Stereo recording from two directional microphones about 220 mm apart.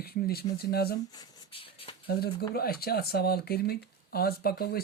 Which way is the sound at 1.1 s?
15° left (ahead or behind).